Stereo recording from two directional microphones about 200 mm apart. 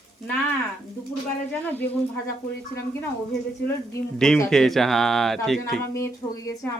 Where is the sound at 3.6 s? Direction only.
5° left (ahead or behind).